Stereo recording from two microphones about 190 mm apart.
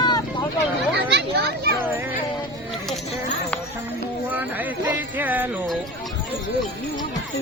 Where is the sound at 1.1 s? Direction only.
60° right (ahead or behind).